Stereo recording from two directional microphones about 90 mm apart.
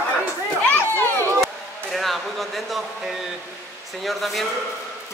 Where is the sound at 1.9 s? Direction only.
Centre (ahead or behind).